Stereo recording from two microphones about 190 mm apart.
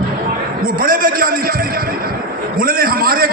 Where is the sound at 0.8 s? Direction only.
50° right (ahead or behind).